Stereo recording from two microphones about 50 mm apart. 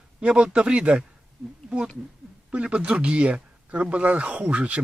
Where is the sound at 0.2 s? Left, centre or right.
Right.